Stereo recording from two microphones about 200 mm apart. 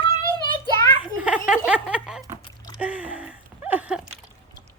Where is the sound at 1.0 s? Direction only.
5° right (ahead or behind).